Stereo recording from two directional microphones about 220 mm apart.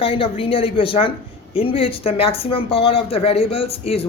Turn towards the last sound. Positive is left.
turn(degrees=25)  # may be behind; listen again after turning